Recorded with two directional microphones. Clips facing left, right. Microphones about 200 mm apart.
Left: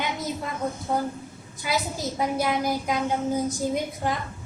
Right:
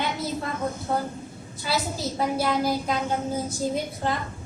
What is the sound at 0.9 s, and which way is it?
Speech, 15° left (ahead or behind).